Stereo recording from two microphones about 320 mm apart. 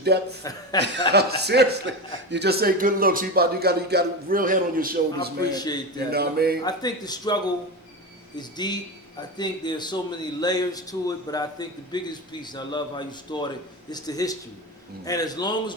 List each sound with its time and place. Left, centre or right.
0.0 s speech: right
0.7 s a man's voice: centre
1.1 s a man's voice: right
5.5 s a man's voice: centre
6.1 s a man's voice: right
6.7 s a man's voice: centre